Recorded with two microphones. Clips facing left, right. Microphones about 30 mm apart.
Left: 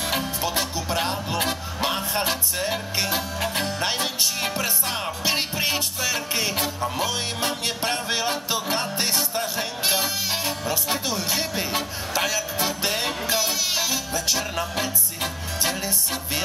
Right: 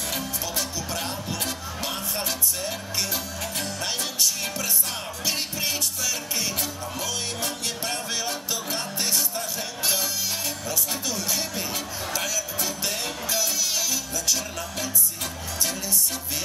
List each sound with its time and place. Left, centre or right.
0.1 s music: left